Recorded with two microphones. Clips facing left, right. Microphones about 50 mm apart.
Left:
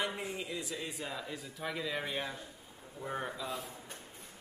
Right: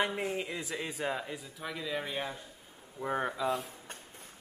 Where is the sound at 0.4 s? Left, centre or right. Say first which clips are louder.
Right 3 dB; right.